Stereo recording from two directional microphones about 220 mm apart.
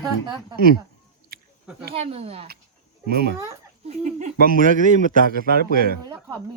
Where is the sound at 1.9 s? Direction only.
25° right (ahead or behind).